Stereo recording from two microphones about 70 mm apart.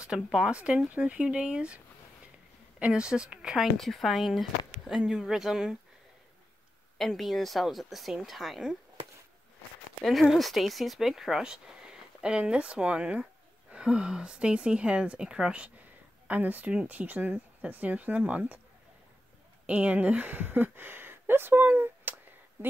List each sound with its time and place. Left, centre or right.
0.0 s speech: centre
2.8 s speech: centre
3.7 s speech: centre
7.0 s speech: centre
10.3 s speech: centre
19.6 s speech: centre